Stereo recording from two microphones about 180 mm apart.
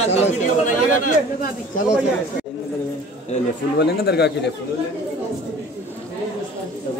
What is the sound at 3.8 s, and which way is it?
Speech, 65° left (ahead or behind).